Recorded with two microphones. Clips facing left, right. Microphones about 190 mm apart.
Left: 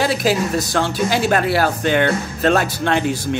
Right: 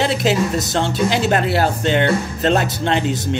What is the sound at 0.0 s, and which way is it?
A woman's voice, 25° right (ahead or behind).